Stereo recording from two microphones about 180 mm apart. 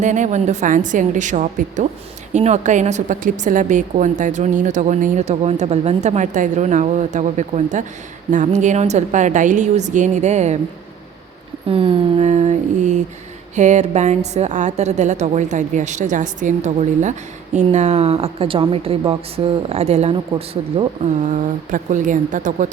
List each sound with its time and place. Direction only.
0.0 s a woman's voice: 40° right (ahead or behind)
11.7 s mantra: 30° right (ahead or behind)
13.6 s a woman's voice: 40° right (ahead or behind)
21.2 s a woman's voice: 45° right (ahead or behind)